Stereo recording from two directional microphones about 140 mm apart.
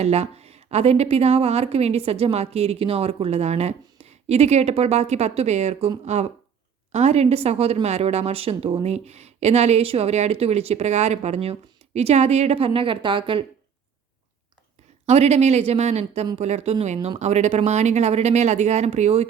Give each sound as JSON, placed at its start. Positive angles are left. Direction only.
{"t": 0.0, "sound": "a woman's voice", "side_deg": -50}
{"t": 15.0, "sound": "a woman's voice", "side_deg": -50}